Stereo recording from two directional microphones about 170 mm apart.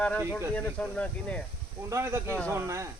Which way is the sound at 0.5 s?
5° left (ahead or behind).